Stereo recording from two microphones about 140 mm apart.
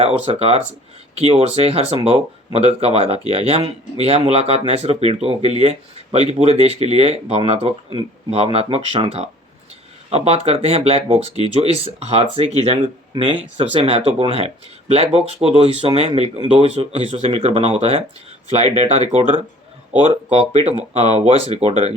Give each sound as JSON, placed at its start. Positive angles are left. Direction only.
{"t": 0.3, "sound": "speech", "side_deg": -45}